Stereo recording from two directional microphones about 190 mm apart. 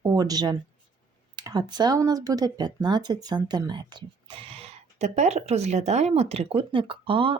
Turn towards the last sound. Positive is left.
turn(degrees=-30)  # may be behind; listen again after turning